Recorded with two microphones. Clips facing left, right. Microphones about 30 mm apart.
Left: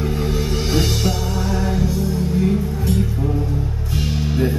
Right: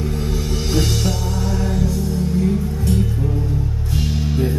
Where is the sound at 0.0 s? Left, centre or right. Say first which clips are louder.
Left 2 dB; centre.